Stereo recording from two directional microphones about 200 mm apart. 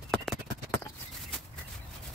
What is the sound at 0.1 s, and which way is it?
Clip-clop, centre (ahead or behind).